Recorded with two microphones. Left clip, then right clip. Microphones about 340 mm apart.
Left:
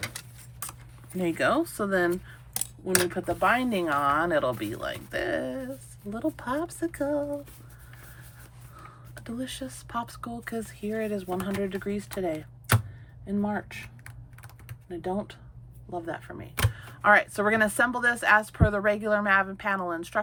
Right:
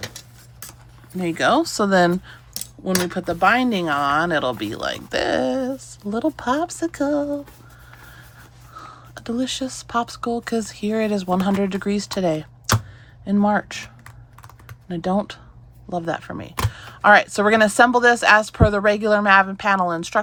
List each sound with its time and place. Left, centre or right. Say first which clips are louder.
1.2 s speech: right 7 dB; centre
8.8 s speech: right 9 dB; centre